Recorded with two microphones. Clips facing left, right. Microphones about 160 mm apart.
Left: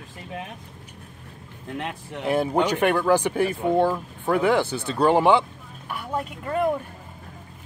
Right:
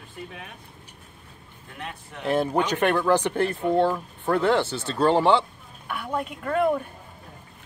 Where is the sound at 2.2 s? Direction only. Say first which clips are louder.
Left 1 dB; 10° left (ahead or behind).